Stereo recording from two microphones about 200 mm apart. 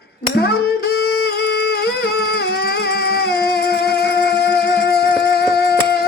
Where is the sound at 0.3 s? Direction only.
50° left (ahead or behind).